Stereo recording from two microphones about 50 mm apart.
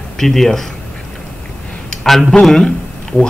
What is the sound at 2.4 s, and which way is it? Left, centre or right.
Speech, centre.